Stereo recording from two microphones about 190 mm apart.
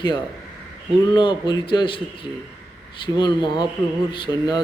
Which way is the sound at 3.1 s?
25° left (ahead or behind).